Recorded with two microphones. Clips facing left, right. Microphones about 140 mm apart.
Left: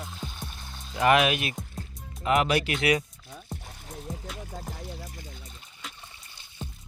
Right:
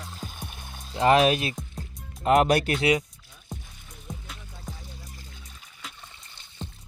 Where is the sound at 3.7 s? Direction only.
75° left (ahead or behind).